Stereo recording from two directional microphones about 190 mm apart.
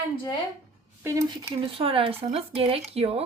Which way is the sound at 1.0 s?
15° right (ahead or behind).